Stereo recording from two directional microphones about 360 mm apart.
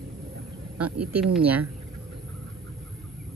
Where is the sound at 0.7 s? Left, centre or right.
Right.